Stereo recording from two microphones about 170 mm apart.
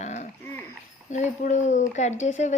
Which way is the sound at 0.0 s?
45° left (ahead or behind).